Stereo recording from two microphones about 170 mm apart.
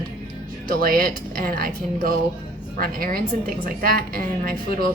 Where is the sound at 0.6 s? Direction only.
60° right (ahead or behind).